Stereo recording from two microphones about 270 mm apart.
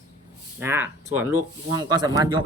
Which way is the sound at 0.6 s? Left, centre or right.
Centre.